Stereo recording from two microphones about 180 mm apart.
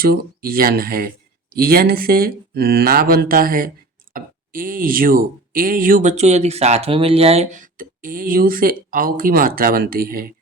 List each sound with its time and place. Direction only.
0.0 s speech: 55° right (ahead or behind)